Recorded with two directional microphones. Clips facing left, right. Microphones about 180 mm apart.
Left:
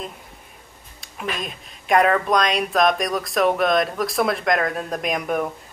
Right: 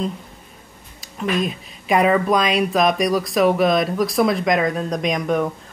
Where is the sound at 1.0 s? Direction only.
Centre (ahead or behind).